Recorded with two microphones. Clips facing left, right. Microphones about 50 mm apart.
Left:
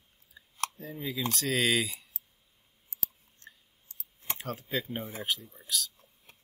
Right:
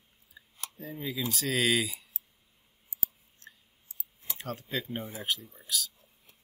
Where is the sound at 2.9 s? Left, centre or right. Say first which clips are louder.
Even; left.